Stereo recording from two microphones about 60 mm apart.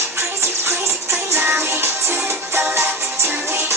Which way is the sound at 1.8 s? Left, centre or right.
Right.